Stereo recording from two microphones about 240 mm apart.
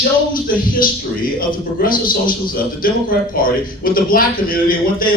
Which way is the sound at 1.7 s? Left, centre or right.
Left.